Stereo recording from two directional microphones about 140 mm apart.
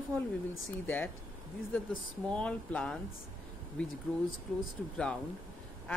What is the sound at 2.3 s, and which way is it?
Speech, 10° left (ahead or behind).